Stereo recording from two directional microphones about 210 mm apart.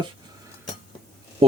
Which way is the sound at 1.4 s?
25° right (ahead or behind).